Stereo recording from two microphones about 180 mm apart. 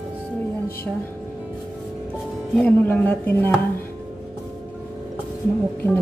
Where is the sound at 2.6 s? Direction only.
10° left (ahead or behind).